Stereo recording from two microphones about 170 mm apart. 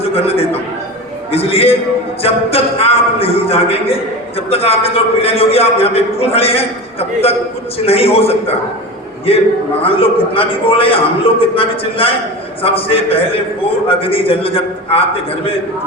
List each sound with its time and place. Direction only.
0.0 s a man's voice: 35° left (ahead or behind)
7.9 s a man's voice: 35° left (ahead or behind)